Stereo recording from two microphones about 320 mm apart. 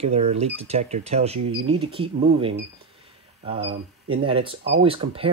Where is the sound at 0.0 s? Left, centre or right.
Centre.